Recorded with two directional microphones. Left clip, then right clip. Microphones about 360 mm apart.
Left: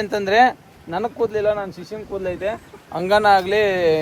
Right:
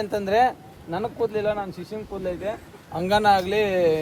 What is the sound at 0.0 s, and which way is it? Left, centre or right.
A man's voice, left.